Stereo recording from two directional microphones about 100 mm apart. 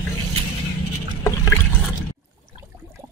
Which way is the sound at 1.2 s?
30° left (ahead or behind).